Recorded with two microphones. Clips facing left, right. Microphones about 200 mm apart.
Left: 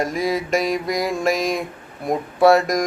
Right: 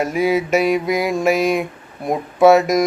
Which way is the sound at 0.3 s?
5° right (ahead or behind).